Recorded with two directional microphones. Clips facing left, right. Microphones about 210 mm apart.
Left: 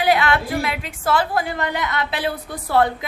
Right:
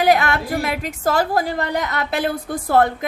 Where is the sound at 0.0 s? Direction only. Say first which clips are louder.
Right 2 dB; 45° right (ahead or behind).